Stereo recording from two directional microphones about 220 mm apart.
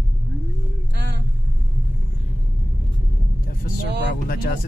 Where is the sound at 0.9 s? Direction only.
50° right (ahead or behind).